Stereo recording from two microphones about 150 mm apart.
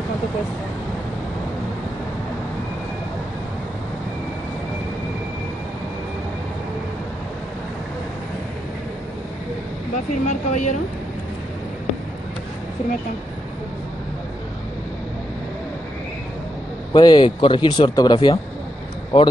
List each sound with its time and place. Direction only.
10.2 s speech: 55° left (ahead or behind)
16.9 s speech: 30° left (ahead or behind)